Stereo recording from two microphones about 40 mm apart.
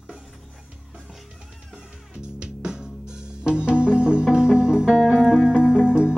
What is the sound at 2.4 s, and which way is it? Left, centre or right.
Music, right.